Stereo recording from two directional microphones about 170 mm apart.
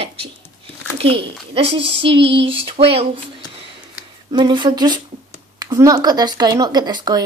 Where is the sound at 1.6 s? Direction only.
35° right (ahead or behind).